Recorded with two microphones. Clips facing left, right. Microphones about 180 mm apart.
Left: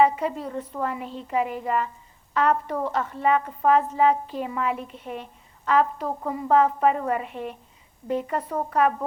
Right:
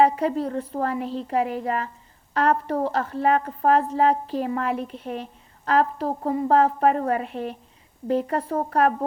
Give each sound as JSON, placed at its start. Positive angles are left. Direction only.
{"t": 0.0, "sound": "a woman's voice", "side_deg": -35}